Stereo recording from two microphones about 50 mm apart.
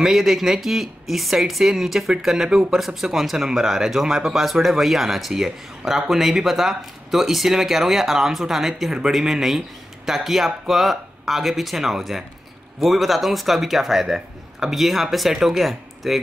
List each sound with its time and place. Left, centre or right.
0.0 s speech: centre